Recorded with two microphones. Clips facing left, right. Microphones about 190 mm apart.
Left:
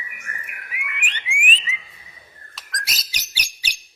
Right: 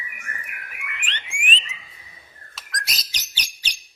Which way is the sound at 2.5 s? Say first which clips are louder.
Even; centre (ahead or behind).